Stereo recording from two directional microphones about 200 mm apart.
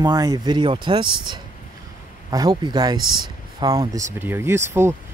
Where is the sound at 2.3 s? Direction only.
20° right (ahead or behind).